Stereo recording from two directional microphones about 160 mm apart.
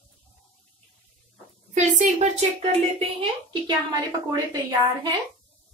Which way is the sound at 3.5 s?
25° right (ahead or behind).